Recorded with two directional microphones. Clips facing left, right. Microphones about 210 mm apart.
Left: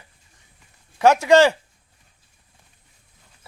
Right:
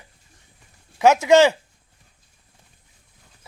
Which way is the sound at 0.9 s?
15° right (ahead or behind).